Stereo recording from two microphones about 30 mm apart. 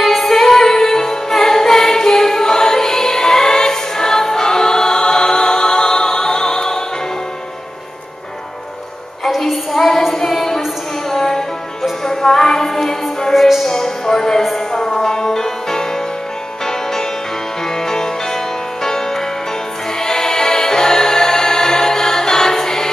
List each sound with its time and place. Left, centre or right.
0.0 s music: centre
9.5 s music: centre
13.3 s music: centre
13.7 s a sound: centre
14.7 s music: centre
17.6 s music: centre